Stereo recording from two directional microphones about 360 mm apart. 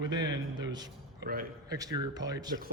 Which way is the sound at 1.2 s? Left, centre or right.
Right.